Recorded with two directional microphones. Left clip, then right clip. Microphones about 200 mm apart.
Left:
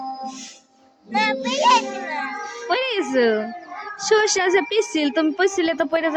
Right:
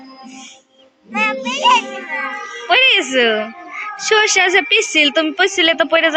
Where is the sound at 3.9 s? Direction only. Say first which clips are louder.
Right 5 dB; 20° left (ahead or behind).